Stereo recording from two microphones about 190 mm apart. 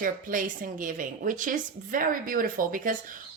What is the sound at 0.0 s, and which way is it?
A woman's voice, 45° right (ahead or behind).